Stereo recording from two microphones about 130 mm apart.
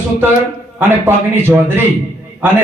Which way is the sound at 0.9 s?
15° right (ahead or behind).